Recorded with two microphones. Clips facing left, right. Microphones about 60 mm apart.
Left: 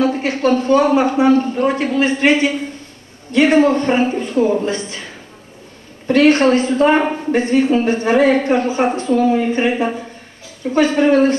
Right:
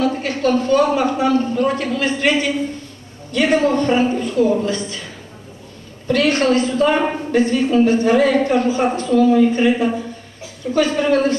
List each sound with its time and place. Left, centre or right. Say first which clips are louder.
0.0 s a woman's voice: left 2 dB; left
6.0 s a woman's voice: left 4 dB; left